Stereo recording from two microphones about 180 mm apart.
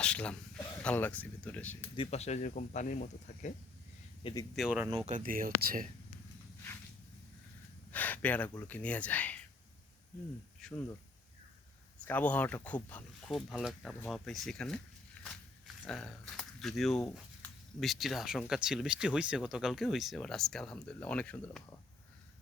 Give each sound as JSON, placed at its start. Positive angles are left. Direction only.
{"t": 0.0, "sound": "speech", "side_deg": 5}
{"t": 2.0, "sound": "speech", "side_deg": 35}
{"t": 4.2, "sound": "speech", "side_deg": 30}
{"t": 4.5, "sound": "speech", "side_deg": -5}
{"t": 4.9, "sound": "speech", "side_deg": -30}
{"t": 5.1, "sound": "speech", "side_deg": -50}
{"t": 7.9, "sound": "a sound", "side_deg": 10}
{"t": 8.6, "sound": "speech", "side_deg": 10}
{"t": 10.6, "sound": "speech", "side_deg": 5}
{"t": 12.0, "sound": "speech", "side_deg": 10}